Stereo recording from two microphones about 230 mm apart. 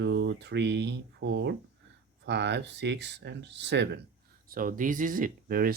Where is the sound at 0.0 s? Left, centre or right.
Right.